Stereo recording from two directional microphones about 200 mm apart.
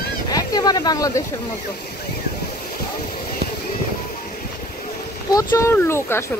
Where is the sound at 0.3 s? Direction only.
20° left (ahead or behind).